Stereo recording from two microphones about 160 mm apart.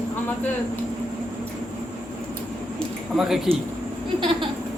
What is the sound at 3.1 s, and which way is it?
Speech, centre (ahead or behind).